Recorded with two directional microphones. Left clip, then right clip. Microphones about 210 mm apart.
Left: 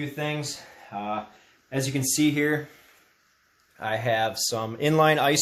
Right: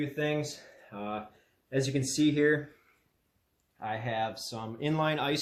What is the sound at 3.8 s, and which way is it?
Speech, 45° left (ahead or behind).